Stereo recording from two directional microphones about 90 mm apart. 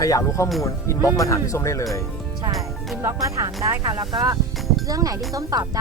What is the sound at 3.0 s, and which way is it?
Speech, 35° right (ahead or behind).